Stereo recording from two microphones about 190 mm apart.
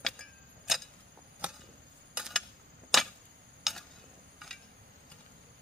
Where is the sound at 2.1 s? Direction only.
Centre (ahead or behind).